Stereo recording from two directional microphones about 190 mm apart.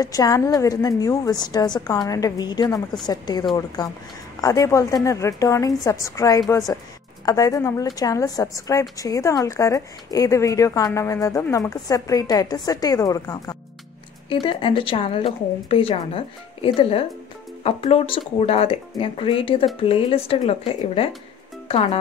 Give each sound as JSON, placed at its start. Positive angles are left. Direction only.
{"t": 0.0, "sound": "a woman's voice", "side_deg": 20}